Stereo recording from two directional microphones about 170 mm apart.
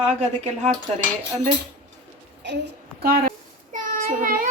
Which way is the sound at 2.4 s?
85° right.